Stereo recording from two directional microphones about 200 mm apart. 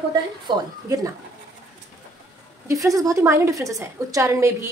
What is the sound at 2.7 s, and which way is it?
A woman's voice, 15° right (ahead or behind).